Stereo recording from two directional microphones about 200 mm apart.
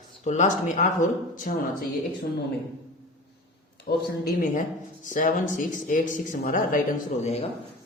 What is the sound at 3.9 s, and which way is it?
Speech, 50° left (ahead or behind).